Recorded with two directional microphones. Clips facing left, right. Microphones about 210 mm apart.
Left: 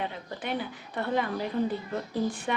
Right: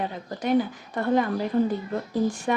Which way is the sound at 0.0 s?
40° right (ahead or behind).